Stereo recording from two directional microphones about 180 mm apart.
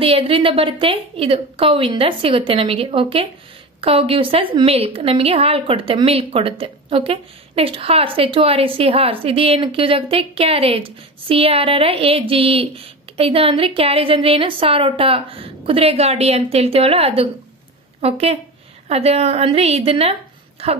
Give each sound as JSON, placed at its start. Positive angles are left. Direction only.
{"t": 0.0, "sound": "a woman's voice", "side_deg": -30}